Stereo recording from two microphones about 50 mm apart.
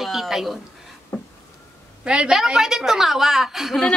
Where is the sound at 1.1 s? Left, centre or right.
Left.